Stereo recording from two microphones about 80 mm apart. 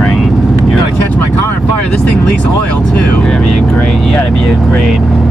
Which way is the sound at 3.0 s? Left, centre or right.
Centre.